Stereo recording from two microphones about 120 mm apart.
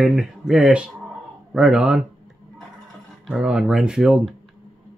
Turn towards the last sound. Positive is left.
turn(degrees=-5)  # may be behind; listen again after turning